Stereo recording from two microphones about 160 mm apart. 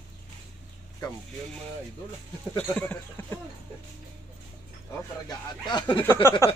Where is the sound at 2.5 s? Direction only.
10° left (ahead or behind).